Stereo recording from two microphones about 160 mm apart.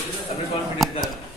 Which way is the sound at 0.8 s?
Centre (ahead or behind).